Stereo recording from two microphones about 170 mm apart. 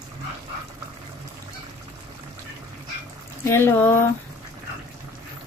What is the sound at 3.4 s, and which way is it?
Speech, 15° left (ahead or behind).